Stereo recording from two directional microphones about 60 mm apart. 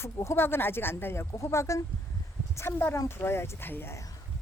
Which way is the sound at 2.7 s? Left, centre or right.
Left.